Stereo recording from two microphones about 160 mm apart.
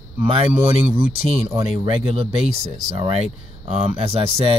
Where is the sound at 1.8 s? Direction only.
35° right (ahead or behind).